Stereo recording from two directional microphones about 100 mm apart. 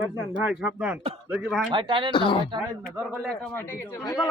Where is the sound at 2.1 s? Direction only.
55° left (ahead or behind).